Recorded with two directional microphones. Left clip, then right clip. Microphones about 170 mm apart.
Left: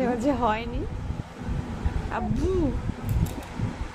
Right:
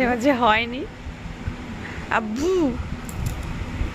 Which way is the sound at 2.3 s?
10° right (ahead or behind).